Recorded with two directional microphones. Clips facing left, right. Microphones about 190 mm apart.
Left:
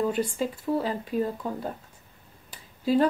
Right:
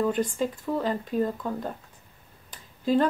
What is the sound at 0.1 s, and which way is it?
Speech, 10° left (ahead or behind).